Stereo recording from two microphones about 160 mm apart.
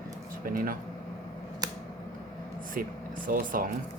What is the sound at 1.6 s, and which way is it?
Scissors, 25° right (ahead or behind).